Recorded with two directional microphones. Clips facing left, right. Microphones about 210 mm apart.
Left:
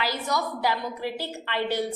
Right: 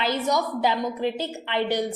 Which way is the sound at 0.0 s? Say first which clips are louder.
Right 4 dB; 20° right (ahead or behind).